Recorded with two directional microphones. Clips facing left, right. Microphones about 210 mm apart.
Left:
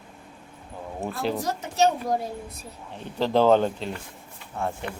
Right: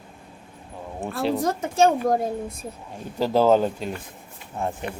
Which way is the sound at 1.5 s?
50° right (ahead or behind).